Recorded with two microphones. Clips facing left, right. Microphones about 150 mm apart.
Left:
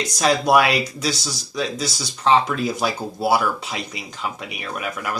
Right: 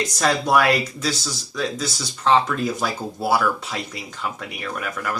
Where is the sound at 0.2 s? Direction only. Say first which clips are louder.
Left 3 dB; 15° left (ahead or behind).